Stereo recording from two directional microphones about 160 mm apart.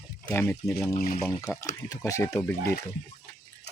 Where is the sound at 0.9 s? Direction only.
60° left (ahead or behind).